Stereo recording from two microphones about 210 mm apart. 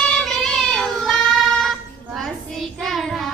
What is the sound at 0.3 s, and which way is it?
Child singing, centre (ahead or behind).